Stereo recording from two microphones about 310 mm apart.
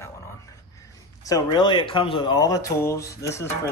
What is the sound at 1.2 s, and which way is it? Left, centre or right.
Speech, centre.